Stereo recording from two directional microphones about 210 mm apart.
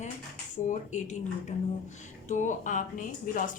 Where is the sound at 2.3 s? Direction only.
35° left (ahead or behind).